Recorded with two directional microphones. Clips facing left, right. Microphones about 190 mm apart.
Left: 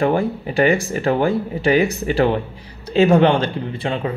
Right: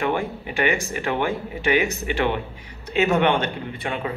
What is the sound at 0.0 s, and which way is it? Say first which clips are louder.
Speech: left 6 dB; 35° left (ahead or behind).